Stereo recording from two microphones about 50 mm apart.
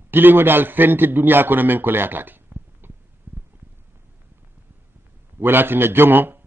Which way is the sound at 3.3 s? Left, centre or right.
Right.